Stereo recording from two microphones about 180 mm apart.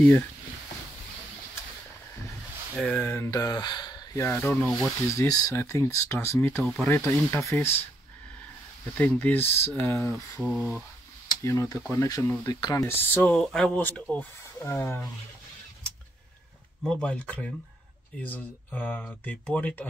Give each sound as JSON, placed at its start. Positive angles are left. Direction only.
{"t": 2.9, "sound": "speech", "side_deg": 10}
{"t": 5.0, "sound": "speech", "side_deg": 15}
{"t": 8.9, "sound": "speech", "side_deg": 10}
{"t": 10.4, "sound": "speech", "side_deg": -5}
{"t": 11.2, "sound": "speech", "side_deg": 15}
{"t": 16.8, "sound": "speech", "side_deg": 5}